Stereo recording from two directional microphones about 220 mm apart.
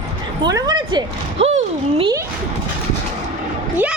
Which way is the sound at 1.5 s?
30° right (ahead or behind).